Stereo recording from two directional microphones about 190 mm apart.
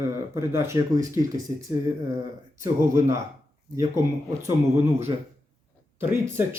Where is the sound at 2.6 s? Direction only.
15° right (ahead or behind).